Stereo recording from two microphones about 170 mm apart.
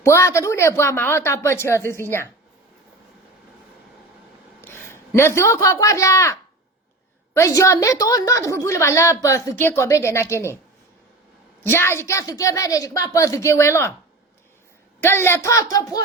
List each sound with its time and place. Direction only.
0.0 s a woman's voice: 15° left (ahead or behind)
4.6 s a man's voice: 15° left (ahead or behind)
7.3 s a woman's voice: 15° left (ahead or behind)
11.6 s a woman's voice: 15° left (ahead or behind)
15.0 s a woman's voice: 15° left (ahead or behind)